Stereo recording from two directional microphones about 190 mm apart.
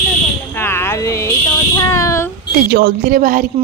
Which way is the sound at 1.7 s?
15° left (ahead or behind).